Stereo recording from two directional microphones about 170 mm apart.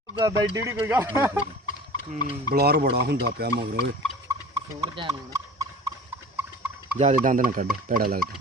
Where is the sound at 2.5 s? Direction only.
70° right (ahead or behind).